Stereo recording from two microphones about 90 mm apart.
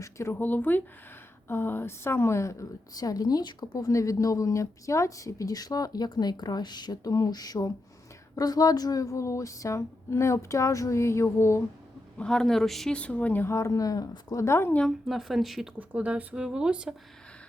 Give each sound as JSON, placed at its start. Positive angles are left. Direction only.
{"t": 0.0, "sound": "speech", "side_deg": 30}
{"t": 3.8, "sound": "speech", "side_deg": 40}
{"t": 12.2, "sound": "speech", "side_deg": 5}
{"t": 14.4, "sound": "speech", "side_deg": 30}
{"t": 14.8, "sound": "speech", "side_deg": -5}
{"t": 15.8, "sound": "speech", "side_deg": -15}